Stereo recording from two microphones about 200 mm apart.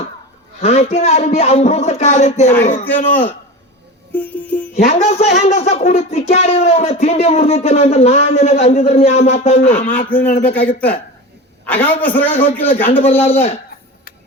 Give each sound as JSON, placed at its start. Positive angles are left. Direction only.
{"t": 0.6, "sound": "speech", "side_deg": 30}
{"t": 2.8, "sound": "a man's voice", "side_deg": 10}
{"t": 4.7, "sound": "speech", "side_deg": 30}
{"t": 10.4, "sound": "a man's voice", "side_deg": 5}
{"t": 12.9, "sound": "speech", "side_deg": 30}